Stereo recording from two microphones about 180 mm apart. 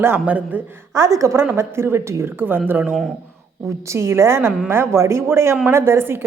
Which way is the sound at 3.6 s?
15° right (ahead or behind).